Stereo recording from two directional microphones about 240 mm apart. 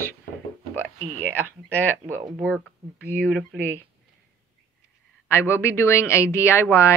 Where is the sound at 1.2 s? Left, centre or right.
Centre.